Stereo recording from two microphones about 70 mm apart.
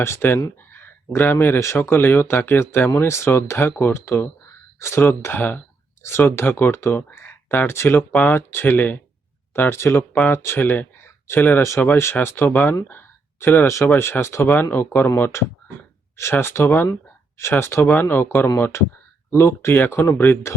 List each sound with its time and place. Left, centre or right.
0.0 s speech: left
0.7 s a sound: left
1.6 s speech: left
6.0 s speech: left
9.5 s speech: left
10.1 s speech: left
10.3 s speech: left
12.9 s a sound: left
13.7 s speech: left